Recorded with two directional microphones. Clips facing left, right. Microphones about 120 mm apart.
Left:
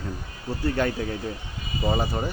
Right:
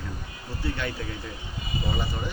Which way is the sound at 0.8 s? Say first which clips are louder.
Left 9 dB; 45° left (ahead or behind).